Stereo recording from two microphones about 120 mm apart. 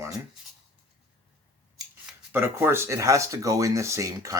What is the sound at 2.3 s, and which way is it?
Speech, 20° right (ahead or behind).